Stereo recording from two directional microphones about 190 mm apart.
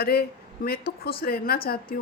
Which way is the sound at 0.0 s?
55° left (ahead or behind).